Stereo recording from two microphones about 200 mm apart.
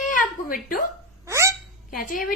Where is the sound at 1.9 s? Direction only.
45° left (ahead or behind).